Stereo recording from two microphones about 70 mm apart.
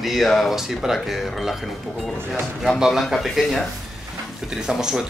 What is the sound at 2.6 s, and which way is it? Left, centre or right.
Speech, centre.